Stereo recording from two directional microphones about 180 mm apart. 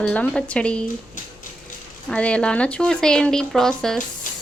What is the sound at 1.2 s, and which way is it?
Music, 45° left (ahead or behind).